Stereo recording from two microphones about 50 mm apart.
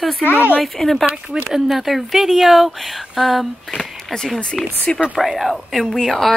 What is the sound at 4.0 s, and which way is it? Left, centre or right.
Speech, centre.